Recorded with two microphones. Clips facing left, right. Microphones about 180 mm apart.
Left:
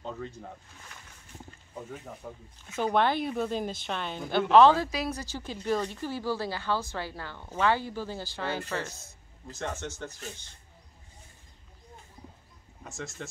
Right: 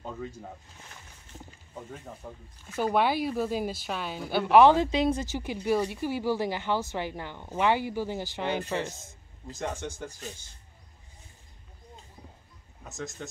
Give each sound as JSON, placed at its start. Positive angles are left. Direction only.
{"t": 0.0, "sound": "a sound", "side_deg": -10}
{"t": 2.2, "sound": "a woman's voice", "side_deg": -5}
{"t": 4.8, "sound": "a woman's voice", "side_deg": -25}
{"t": 12.8, "sound": "speech", "side_deg": 0}